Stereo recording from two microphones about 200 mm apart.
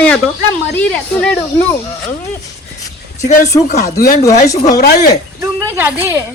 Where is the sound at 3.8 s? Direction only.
50° left (ahead or behind).